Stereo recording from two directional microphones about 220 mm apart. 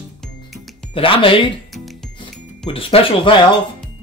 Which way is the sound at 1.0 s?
25° left (ahead or behind).